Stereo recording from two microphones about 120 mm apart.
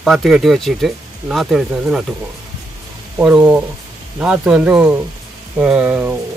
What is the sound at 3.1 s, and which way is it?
Speech, 10° right (ahead or behind).